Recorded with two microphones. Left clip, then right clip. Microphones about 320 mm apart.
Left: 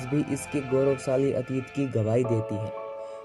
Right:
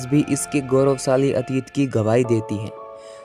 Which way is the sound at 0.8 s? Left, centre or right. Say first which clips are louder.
Right 6 dB; right.